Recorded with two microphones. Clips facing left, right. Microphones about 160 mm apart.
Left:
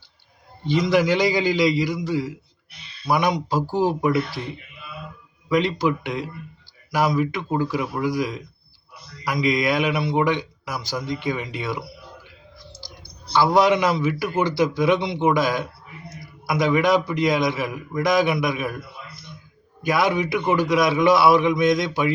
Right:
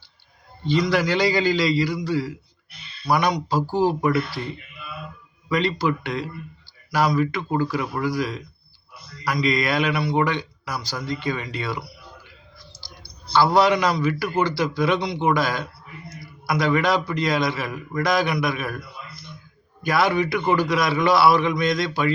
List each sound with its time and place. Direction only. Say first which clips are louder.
0.7 s a man's voice: left 2 dB; 20° left (ahead or behind)
5.5 s a man's voice: left 2 dB; 15° left (ahead or behind)
7.2 s a man's voice: even; 15° left (ahead or behind)
9.5 s a man's voice: left 2 dB; 15° left (ahead or behind)